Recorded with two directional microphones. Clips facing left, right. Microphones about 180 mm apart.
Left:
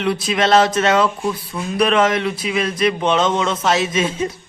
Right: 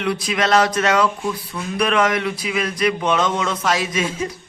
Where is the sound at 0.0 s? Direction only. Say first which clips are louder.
Left 3 dB; 25° left (ahead or behind).